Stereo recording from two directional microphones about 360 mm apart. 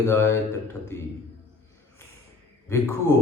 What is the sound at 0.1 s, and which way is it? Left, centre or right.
Speech, centre.